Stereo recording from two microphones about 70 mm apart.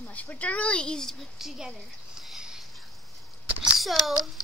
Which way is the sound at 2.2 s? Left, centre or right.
Centre.